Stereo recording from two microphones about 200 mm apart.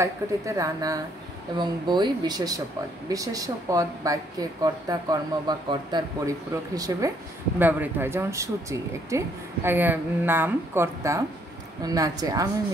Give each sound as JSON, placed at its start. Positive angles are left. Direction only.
{"t": 0.0, "sound": "speech", "side_deg": -15}